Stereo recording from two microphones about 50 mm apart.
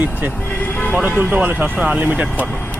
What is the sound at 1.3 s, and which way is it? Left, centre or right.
Speech, right.